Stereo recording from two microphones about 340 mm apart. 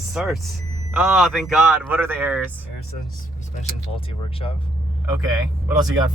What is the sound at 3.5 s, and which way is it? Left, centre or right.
Speech, centre.